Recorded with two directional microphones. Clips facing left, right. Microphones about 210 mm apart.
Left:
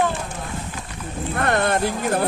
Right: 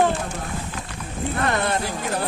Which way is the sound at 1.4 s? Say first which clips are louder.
Left 4 dB; 50° left (ahead or behind).